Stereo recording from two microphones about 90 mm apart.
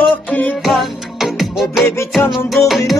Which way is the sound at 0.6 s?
Centre (ahead or behind).